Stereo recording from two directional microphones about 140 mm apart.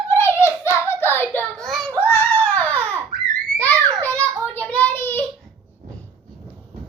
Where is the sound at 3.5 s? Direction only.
10° left (ahead or behind).